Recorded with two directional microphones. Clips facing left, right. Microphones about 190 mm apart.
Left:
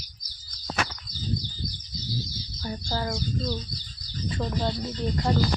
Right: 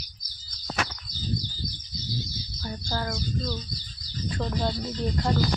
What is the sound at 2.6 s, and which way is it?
Speech, 15° left (ahead or behind).